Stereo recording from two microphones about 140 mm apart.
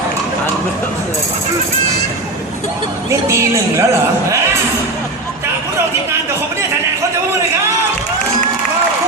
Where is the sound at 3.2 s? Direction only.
20° right (ahead or behind).